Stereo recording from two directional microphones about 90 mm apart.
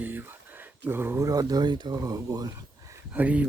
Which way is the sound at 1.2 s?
45° right (ahead or behind).